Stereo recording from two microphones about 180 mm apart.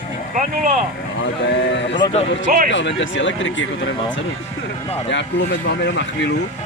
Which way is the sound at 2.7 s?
85° left.